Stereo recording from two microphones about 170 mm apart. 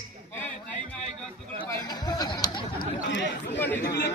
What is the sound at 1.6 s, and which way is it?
Chatter, 25° left (ahead or behind).